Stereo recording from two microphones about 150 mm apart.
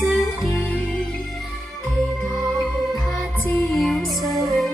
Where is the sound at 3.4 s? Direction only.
5° left (ahead or behind).